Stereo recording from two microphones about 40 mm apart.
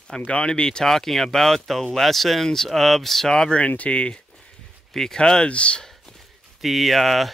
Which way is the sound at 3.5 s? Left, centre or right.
Left.